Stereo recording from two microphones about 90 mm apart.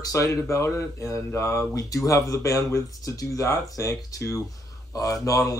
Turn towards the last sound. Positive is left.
turn(degrees=40)  # may be behind; listen again after turning